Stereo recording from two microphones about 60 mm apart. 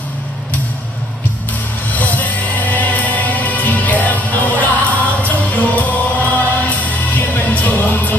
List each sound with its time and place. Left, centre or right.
1.9 s music: left